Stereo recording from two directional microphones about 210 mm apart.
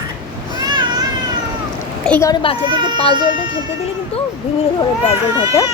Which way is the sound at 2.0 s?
10° left (ahead or behind).